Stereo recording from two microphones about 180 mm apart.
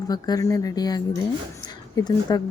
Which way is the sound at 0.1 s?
20° left (ahead or behind).